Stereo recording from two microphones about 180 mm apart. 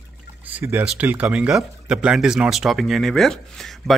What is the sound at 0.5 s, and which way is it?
Speech, 10° right (ahead or behind).